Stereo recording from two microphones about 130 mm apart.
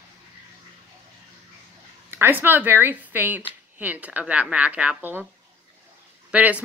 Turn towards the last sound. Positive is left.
turn(degrees=-10)  # may be behind; listen again after turning